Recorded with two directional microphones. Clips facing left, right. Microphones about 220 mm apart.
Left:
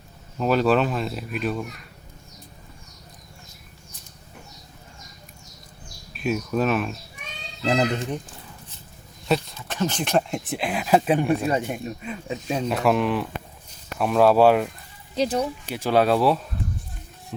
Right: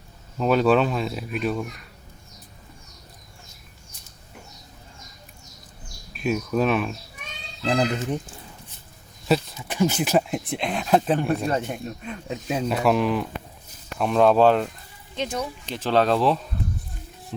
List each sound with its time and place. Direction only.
0.3 s speech: centre (ahead or behind)
6.1 s speech: centre (ahead or behind)
9.6 s speech: 10° right (ahead or behind); by 14.7 s 10° left (ahead or behind)
15.1 s speech: 35° left (ahead or behind)
15.6 s speech: 10° left (ahead or behind)